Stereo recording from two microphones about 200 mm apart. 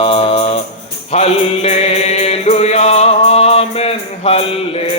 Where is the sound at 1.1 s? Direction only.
30° left (ahead or behind).